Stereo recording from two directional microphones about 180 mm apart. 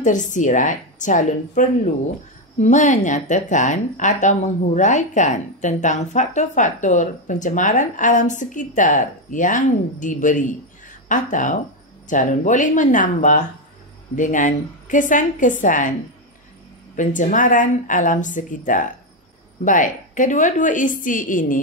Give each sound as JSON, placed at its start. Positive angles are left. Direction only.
{"t": 0.0, "sound": "a woman's voice", "side_deg": 45}
{"t": 16.9, "sound": "a woman's voice", "side_deg": 45}